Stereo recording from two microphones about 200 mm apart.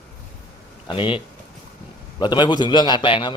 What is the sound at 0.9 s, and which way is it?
A man's voice, 25° left (ahead or behind).